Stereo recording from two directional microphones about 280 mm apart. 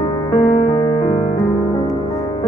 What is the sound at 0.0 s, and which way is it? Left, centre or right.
Music, centre.